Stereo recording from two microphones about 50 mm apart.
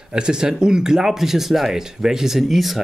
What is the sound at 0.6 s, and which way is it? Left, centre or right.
Speech, centre.